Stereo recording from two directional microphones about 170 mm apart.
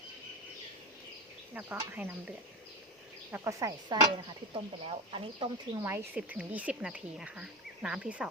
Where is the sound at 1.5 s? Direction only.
10° right (ahead or behind).